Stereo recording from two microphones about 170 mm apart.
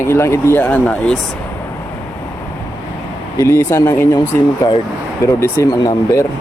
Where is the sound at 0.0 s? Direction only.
15° left (ahead or behind).